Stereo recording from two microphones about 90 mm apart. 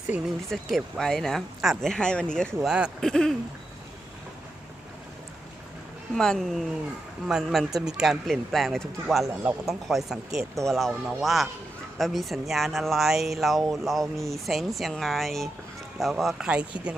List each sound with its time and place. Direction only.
0.1 s speech: 15° right (ahead or behind)
0.5 s speech: 5° left (ahead or behind)
2.6 s speech: 10° right (ahead or behind)
3.0 s speech: 5° left (ahead or behind)
6.1 s speech: 5° left (ahead or behind); by 16.9 s 15° right (ahead or behind)